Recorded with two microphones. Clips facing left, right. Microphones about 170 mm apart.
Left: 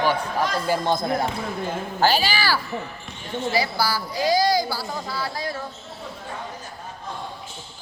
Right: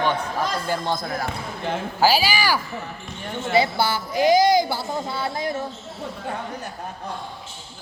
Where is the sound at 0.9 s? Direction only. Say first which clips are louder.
Left 4 dB; 25° left (ahead or behind).